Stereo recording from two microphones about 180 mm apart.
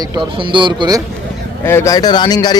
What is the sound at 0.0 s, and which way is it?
A man's voice, 25° right (ahead or behind).